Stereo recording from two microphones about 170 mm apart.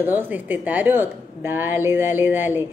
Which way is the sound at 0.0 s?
10° right (ahead or behind).